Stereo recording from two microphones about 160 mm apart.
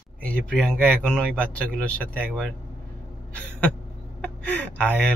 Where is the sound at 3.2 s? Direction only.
10° left (ahead or behind).